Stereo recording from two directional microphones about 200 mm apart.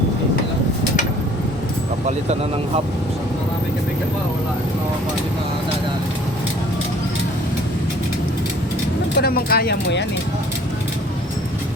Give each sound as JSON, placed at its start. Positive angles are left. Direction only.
{"t": 2.0, "sound": "speech", "side_deg": -30}
{"t": 9.1, "sound": "speech", "side_deg": 50}